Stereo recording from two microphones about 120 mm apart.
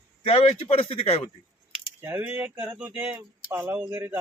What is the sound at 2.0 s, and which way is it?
A man's voice, 20° right (ahead or behind).